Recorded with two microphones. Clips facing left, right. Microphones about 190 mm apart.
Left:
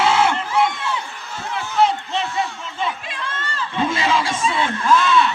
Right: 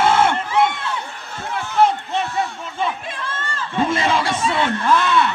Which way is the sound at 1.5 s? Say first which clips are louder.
Right 1 dB; 50° right (ahead or behind).